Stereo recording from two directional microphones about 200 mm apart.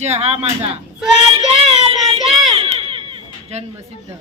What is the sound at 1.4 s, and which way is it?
Child singing, 30° right (ahead or behind).